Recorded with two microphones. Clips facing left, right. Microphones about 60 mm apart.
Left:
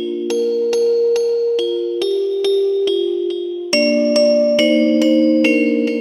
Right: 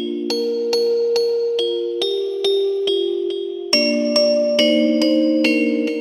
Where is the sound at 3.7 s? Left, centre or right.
Left.